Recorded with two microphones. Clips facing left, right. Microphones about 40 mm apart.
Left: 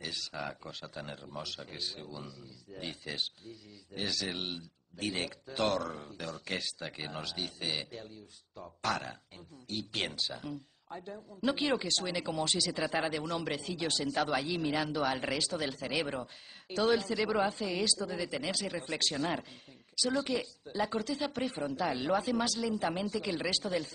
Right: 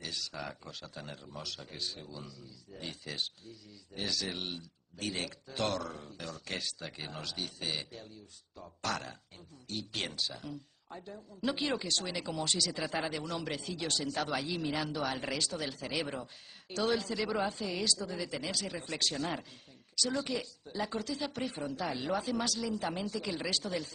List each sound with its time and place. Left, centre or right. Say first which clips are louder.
0.0 s a man's voice: left 2 dB; centre
8.5 s a man's voice: left 2 dB; centre
23.2 s speech: left 2 dB; left
23.5 s a man's voice: left 2 dB; centre